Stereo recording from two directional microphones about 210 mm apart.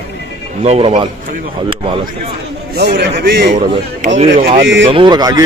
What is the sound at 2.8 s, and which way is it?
Speech, 50° right (ahead or behind).